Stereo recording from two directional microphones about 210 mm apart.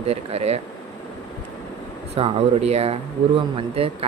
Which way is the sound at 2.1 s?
30° right (ahead or behind).